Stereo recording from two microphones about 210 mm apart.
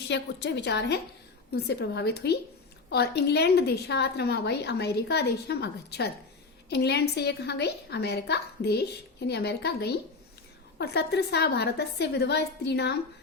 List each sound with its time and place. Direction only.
0.1 s a woman's voice: 55° left (ahead or behind)